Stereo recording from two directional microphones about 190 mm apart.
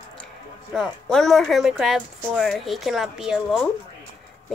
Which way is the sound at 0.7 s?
5° left (ahead or behind).